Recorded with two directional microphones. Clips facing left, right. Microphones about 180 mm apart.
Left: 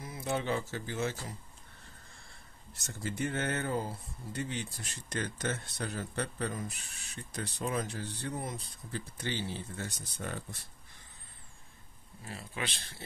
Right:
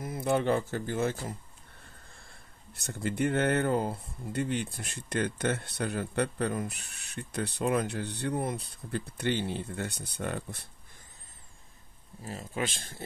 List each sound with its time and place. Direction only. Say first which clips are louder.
0.0 s speech: right 7 dB; 55° right (ahead or behind)
2.7 s speech: right 5 dB; 60° right (ahead or behind)
12.3 s speech: right 6 dB; 40° right (ahead or behind)